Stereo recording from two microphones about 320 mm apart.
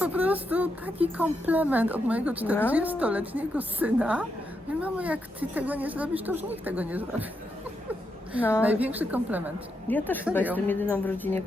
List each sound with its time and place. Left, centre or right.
0.0 s a sound: centre
1.1 s a woman's voice: centre
8.6 s a woman's voice: centre
9.8 s a woman's voice: centre